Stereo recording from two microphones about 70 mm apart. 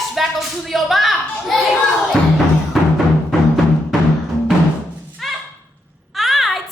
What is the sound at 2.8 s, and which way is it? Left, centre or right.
Music, centre.